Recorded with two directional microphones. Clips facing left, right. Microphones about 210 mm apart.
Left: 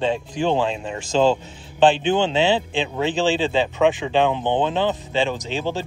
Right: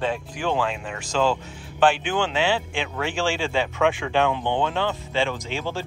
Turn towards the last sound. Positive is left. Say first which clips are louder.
# left 4 dB
turn(degrees=20)  # may be behind; listen again after turning